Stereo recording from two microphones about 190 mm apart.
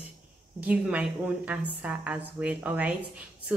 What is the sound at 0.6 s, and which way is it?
A woman's voice, 5° right (ahead or behind).